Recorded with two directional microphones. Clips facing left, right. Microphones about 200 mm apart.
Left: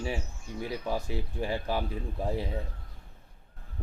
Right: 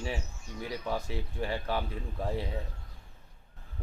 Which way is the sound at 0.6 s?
15° left (ahead or behind).